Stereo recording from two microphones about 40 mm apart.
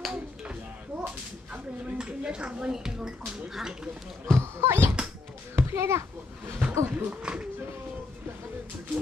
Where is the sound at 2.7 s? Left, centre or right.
Centre.